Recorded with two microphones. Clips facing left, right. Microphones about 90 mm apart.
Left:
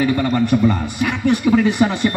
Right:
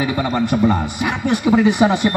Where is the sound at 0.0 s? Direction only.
15° right (ahead or behind).